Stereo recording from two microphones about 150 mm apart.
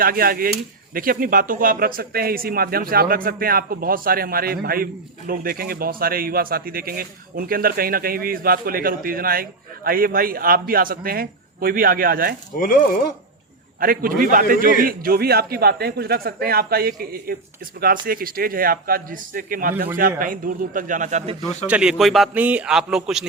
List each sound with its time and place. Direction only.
0.0 s speech: 75° right (ahead or behind)
12.5 s speech: 65° left (ahead or behind)
13.7 s a man's voice: 70° right (ahead or behind); by 21.3 s 50° right (ahead or behind)
21.7 s a man's voice: 5° right (ahead or behind)